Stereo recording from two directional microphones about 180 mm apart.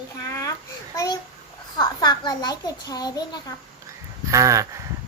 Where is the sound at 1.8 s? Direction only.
25° left (ahead or behind).